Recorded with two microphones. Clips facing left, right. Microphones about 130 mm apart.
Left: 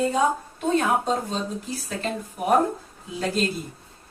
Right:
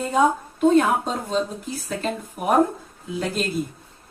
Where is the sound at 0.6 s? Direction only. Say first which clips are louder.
Right 6 dB; 55° right (ahead or behind).